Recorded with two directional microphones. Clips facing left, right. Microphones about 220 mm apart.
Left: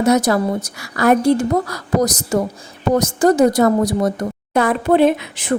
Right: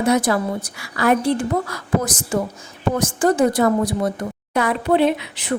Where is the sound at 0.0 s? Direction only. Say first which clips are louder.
Left 3 dB; 40° left (ahead or behind).